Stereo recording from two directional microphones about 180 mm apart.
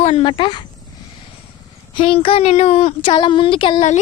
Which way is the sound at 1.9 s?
30° left (ahead or behind).